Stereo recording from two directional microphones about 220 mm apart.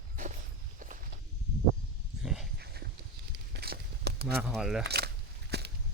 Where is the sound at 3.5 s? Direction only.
45° right (ahead or behind).